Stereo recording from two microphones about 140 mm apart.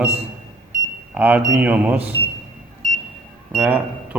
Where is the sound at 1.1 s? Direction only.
10° right (ahead or behind).